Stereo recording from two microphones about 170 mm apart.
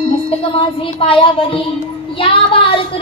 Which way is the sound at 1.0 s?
30° left (ahead or behind).